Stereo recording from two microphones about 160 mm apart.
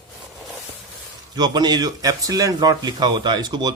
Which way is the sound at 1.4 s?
25° right (ahead or behind).